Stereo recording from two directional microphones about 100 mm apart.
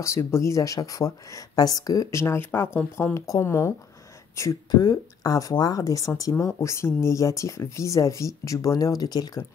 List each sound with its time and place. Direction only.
0.0 s speech: 25° left (ahead or behind)
4.6 s speech: 40° left (ahead or behind)